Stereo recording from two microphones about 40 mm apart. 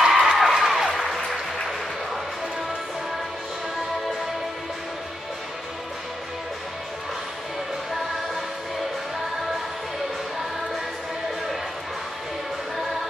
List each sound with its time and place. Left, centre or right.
0.0 s music: centre